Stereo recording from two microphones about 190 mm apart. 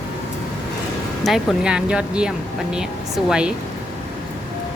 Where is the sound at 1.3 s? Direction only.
5° right (ahead or behind).